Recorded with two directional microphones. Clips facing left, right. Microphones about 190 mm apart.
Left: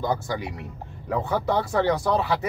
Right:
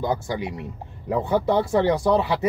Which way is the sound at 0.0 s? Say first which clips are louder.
Right 1 dB; 15° right (ahead or behind).